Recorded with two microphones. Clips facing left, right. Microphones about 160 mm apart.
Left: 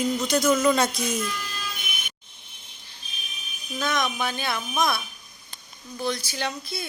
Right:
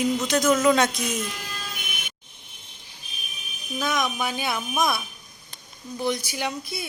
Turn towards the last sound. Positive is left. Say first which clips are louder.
# right 1 dB
turn(degrees=-15)  # may be behind; listen again after turning